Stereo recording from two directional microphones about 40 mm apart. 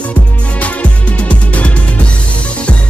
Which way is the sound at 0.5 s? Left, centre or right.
Left.